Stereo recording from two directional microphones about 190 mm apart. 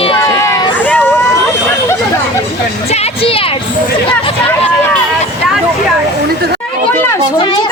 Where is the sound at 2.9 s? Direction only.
35° left (ahead or behind).